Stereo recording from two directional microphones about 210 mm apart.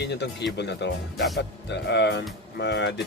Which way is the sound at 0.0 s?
55° left (ahead or behind).